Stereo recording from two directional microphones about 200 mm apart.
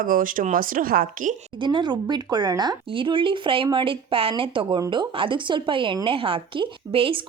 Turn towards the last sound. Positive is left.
turn(degrees=-25)  # may be behind; listen again after turning